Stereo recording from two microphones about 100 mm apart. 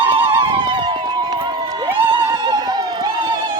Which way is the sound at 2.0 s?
50° right (ahead or behind).